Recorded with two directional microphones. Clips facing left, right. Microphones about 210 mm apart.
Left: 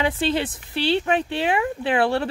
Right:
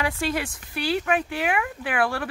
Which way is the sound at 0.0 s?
25° left (ahead or behind).